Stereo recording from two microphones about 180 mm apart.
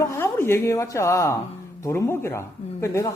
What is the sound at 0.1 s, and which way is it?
A man's voice, 15° left (ahead or behind).